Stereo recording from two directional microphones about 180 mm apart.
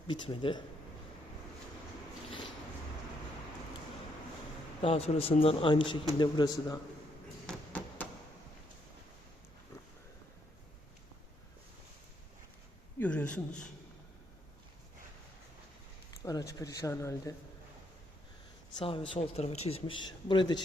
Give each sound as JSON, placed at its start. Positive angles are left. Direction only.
{"t": 0.1, "sound": "a man's voice", "side_deg": 30}
{"t": 4.8, "sound": "a man's voice", "side_deg": 35}
{"t": 7.4, "sound": "a sound", "side_deg": 10}
{"t": 13.0, "sound": "speech", "side_deg": 10}
{"t": 16.2, "sound": "speech", "side_deg": 20}
{"t": 18.8, "sound": "a man's voice", "side_deg": 30}